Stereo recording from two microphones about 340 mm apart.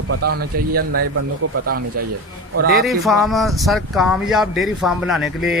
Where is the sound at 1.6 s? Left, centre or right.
Right.